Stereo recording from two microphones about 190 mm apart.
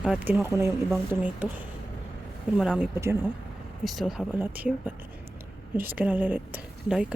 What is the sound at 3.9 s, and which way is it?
Speech, centre (ahead or behind).